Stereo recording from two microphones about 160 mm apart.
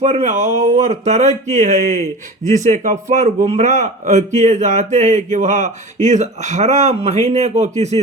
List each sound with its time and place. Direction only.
0.0 s speech: 45° right (ahead or behind)